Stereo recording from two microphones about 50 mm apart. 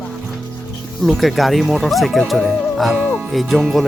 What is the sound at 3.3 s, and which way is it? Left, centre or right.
Speech, centre.